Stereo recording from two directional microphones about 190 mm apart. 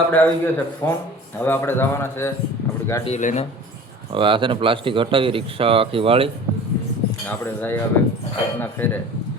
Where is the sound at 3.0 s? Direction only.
40° left (ahead or behind).